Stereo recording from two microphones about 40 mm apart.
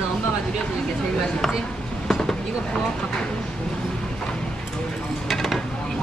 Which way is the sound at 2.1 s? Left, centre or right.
Centre.